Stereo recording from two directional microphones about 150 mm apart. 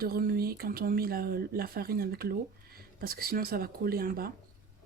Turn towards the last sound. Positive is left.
turn(degrees=-80)